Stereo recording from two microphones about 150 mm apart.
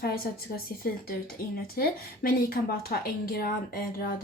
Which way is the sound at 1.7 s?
75° left (ahead or behind).